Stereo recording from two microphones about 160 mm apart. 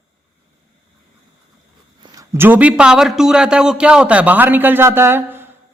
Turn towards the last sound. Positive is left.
turn(degrees=-15)  # may be behind; listen again after turning